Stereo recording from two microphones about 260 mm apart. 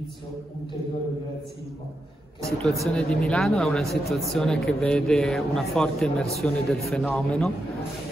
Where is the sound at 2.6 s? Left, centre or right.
Centre.